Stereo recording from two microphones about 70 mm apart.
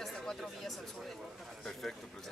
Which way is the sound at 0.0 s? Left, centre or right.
Centre.